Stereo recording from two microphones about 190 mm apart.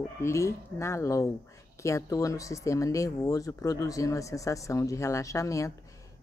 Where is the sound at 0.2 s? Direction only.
15° left (ahead or behind).